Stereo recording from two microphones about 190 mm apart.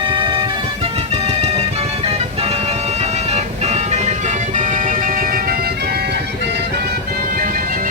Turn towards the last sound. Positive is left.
turn(degrees=-50)  # may be behind; listen again after turning